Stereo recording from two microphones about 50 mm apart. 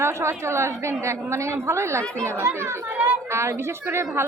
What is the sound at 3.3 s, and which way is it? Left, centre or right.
Speech, right.